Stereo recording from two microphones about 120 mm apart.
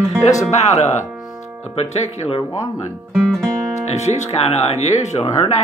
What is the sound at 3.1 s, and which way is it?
Speech, 5° left (ahead or behind).